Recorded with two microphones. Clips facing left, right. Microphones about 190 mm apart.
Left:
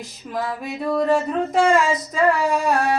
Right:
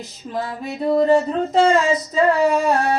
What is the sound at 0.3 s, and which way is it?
Child singing, 25° right (ahead or behind).